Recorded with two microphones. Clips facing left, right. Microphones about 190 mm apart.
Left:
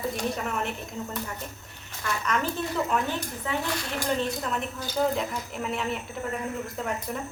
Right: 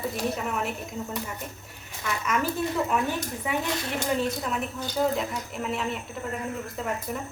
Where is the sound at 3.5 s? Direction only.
20° right (ahead or behind).